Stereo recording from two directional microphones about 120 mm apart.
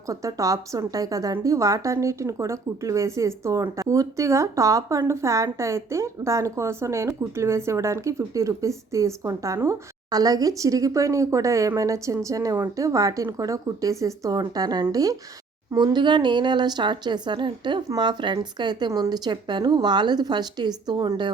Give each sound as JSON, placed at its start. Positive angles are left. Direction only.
{"t": 0.1, "sound": "a woman's voice", "side_deg": -30}